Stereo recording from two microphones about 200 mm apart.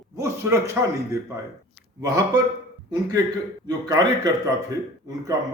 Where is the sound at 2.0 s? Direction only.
20° right (ahead or behind).